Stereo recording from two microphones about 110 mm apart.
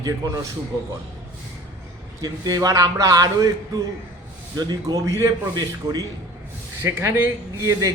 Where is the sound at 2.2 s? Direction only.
35° right (ahead or behind).